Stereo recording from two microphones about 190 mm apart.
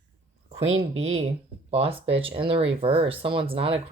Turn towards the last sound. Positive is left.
turn(degrees=-30)  # may be behind; listen again after turning